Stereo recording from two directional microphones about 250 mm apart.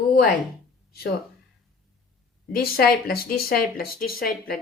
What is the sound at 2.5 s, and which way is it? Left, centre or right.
Speech, left.